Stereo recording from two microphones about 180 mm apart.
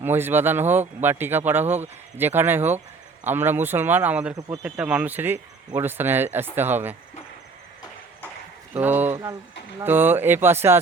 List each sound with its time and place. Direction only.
0.0 s speech: 10° right (ahead or behind)
4.4 s speech: 20° right (ahead or behind)
4.6 s speech: 5° right (ahead or behind)
8.7 s speech: 10° right (ahead or behind)